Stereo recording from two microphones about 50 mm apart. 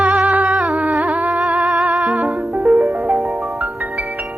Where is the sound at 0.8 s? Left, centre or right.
Right.